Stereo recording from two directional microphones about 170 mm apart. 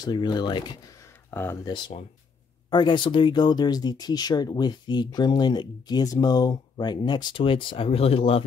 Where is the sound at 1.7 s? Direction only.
30° left (ahead or behind).